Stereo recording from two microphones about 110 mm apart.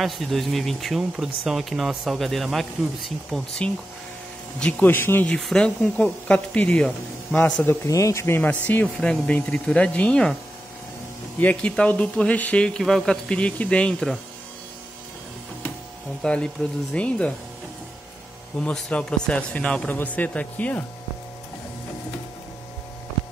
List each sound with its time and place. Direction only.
0.0 s speech: centre (ahead or behind); by 5.3 s 20° left (ahead or behind)
5.3 s speech: 5° left (ahead or behind)
7.6 s speech: 30° left (ahead or behind); by 10.3 s 10° left (ahead or behind)
11.3 s speech: 10° left (ahead or behind)
16.2 s speech: 10° left (ahead or behind)
18.6 s speech: 10° left (ahead or behind)